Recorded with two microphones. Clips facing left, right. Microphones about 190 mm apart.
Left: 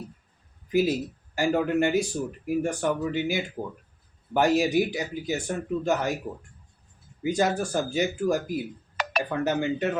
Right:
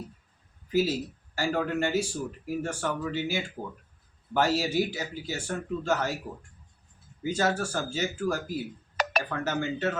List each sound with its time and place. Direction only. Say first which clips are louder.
0.7 s speech: left 3 dB; 15° left (ahead or behind)
7.2 s speech: left 3 dB; 15° left (ahead or behind)
9.0 s a sound: right 2 dB; 40° right (ahead or behind)
9.3 s speech: left 4 dB; 15° left (ahead or behind)